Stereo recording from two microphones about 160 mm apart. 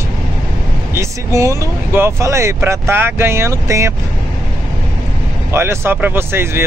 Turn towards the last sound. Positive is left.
turn(degrees=-15)  # may be behind; listen again after turning